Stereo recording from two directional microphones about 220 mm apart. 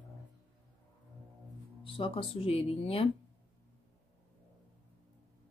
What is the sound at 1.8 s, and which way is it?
Speech, 25° left (ahead or behind).